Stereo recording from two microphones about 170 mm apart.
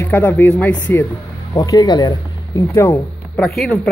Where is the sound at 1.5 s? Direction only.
20° left (ahead or behind).